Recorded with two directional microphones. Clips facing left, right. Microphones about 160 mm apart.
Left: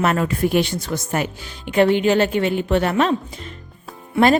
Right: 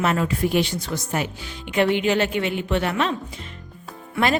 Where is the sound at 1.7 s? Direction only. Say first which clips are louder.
Left 4 dB; 40° left (ahead or behind).